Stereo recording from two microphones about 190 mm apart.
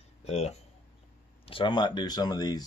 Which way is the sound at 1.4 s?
25° left (ahead or behind).